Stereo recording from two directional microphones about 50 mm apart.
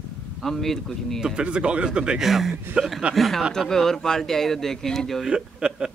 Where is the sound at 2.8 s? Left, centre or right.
Centre.